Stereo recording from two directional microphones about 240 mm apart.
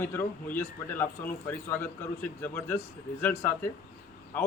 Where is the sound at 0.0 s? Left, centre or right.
Centre.